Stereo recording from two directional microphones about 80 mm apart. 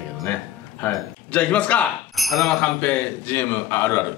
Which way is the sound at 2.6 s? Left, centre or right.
Centre.